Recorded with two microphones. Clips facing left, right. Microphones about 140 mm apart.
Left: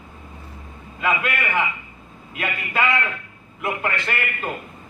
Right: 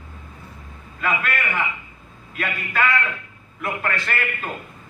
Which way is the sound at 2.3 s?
25° left (ahead or behind).